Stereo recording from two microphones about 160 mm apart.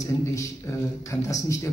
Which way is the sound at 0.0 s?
20° left (ahead or behind).